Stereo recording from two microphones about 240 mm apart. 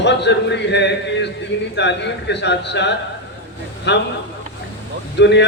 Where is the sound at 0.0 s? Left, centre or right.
Left.